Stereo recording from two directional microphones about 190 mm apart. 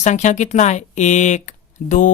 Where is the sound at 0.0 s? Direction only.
40° left (ahead or behind).